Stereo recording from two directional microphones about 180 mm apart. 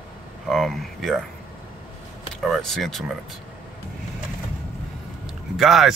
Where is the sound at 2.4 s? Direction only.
Centre (ahead or behind).